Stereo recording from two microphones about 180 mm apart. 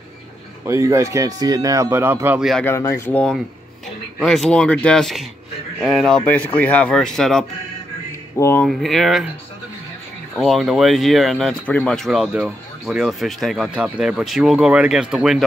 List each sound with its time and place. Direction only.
0.7 s speech: 15° right (ahead or behind)
2.6 s speech: 15° left (ahead or behind)
8.4 s speech: 15° left (ahead or behind)
8.6 s speech: centre (ahead or behind)
10.3 s speech: centre (ahead or behind)